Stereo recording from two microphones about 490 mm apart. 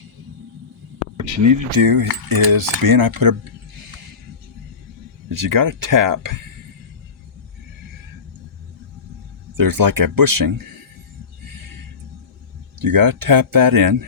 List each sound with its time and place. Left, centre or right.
1.2 s cutlery: right
2.5 s speech: right
5.3 s cutlery: right
9.6 s speech: right
12.8 s cutlery: right